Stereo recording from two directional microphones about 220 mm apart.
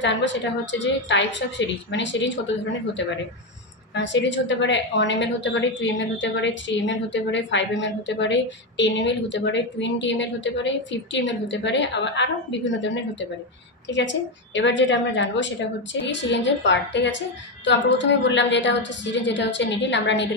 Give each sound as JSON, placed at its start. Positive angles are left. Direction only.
{"t": 0.0, "sound": "a woman's voice", "side_deg": 55}
{"t": 3.9, "sound": "a woman's voice", "side_deg": 55}